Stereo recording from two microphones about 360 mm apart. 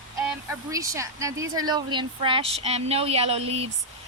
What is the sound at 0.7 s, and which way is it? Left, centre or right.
Speech, centre.